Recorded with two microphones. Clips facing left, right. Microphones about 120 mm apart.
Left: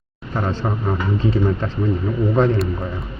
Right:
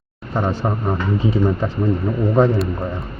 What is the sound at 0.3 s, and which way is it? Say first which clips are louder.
Speech: right 2 dB; 15° right (ahead or behind).